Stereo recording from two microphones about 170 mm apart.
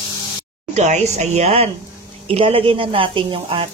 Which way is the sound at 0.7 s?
40° right (ahead or behind).